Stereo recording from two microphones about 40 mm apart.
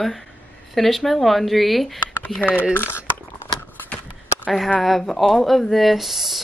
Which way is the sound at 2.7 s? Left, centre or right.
Left.